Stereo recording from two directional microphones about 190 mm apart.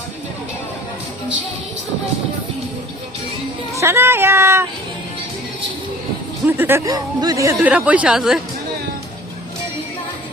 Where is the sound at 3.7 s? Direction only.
15° right (ahead or behind).